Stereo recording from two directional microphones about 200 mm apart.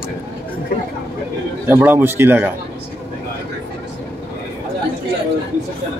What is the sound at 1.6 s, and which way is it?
Speech, 10° right (ahead or behind).